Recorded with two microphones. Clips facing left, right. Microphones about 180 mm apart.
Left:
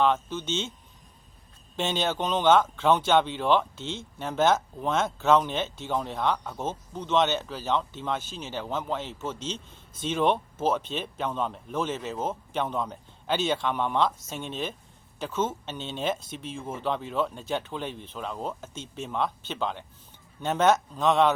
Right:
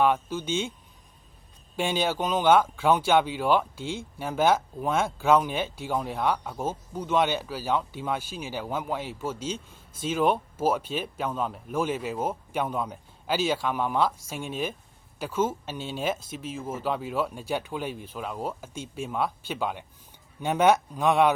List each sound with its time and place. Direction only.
0.0 s speech: 10° right (ahead or behind)
1.7 s speech: 10° right (ahead or behind)